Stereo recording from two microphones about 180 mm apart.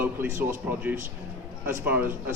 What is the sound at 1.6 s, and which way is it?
Speech, 10° right (ahead or behind).